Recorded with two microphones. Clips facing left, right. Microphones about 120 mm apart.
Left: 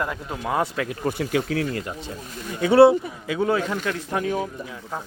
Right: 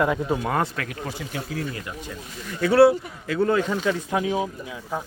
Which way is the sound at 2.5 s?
25° left (ahead or behind).